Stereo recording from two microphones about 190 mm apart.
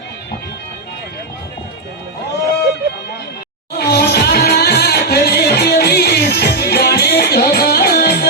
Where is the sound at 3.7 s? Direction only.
55° left (ahead or behind).